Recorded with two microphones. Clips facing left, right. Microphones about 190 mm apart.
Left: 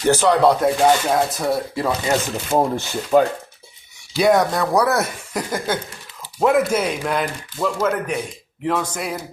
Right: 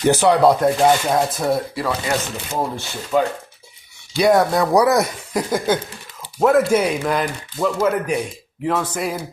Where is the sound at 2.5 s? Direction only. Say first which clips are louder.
Left 6 dB; 50° left (ahead or behind).